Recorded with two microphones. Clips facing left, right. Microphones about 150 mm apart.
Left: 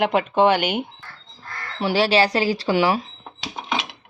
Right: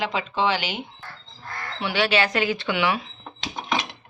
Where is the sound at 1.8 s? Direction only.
35° left (ahead or behind).